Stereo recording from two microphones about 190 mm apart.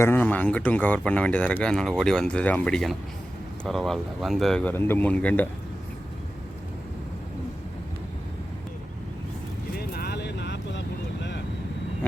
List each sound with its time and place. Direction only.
0.0 s speech: 10° left (ahead or behind)
9.7 s vehicle: 55° left (ahead or behind)